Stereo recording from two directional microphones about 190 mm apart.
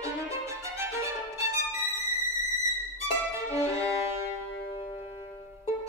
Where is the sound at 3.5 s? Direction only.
15° right (ahead or behind).